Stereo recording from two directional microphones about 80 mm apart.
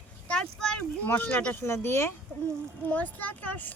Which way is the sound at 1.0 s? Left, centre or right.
Left.